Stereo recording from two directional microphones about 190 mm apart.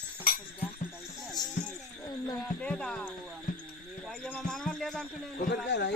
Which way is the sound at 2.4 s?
5° left (ahead or behind).